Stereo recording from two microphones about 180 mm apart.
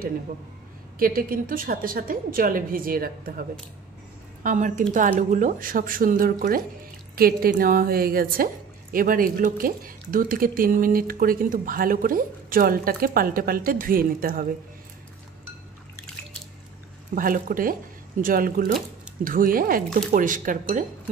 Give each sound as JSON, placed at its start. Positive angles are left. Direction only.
{"t": 0.9, "sound": "a woman's voice", "side_deg": -50}
{"t": 17.1, "sound": "speech", "side_deg": -50}